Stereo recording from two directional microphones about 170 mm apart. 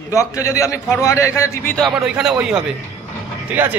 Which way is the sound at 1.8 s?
5° right (ahead or behind).